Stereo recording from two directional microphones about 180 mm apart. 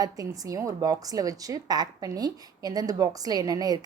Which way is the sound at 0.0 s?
20° right (ahead or behind).